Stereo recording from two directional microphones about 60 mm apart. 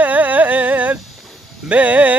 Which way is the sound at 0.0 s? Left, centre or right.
Right.